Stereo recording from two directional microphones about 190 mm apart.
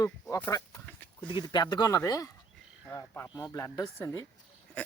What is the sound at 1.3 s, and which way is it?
Speech, 25° left (ahead or behind).